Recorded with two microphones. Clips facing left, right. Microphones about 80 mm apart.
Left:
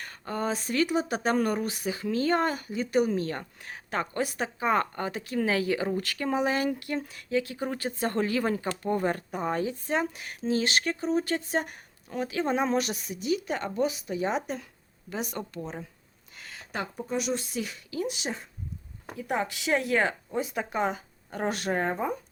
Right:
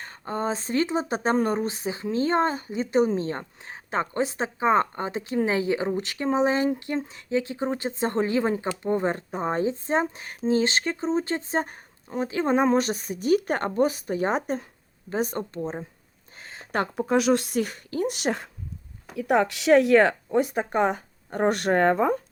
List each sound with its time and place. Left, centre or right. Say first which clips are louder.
0.0 s speech: right 3 dB; right
16.4 s a sound: right 2 dB; right
16.9 s speech: right 9 dB; right